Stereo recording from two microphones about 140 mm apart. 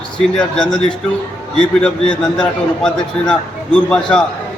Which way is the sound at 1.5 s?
5° left (ahead or behind).